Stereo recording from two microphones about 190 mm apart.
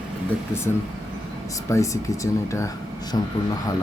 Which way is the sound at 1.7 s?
15° left (ahead or behind).